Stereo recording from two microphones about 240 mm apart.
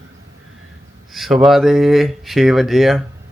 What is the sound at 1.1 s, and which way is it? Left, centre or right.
Speech, centre.